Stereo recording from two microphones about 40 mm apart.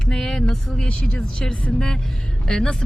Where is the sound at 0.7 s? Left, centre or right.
Left.